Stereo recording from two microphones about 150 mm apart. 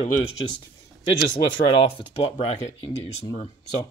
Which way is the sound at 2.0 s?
40° left (ahead or behind).